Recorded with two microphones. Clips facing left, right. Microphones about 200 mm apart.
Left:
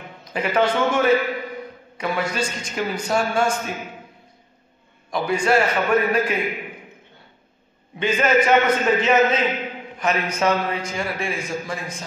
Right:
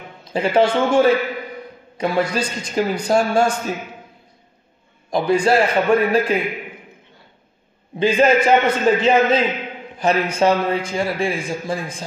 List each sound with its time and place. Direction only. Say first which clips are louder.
0.2 s a man's voice: right 4 dB; 30° right (ahead or behind)
5.1 s a man's voice: right 4 dB; 35° right (ahead or behind)
8.0 s a man's voice: right 4 dB; 30° right (ahead or behind)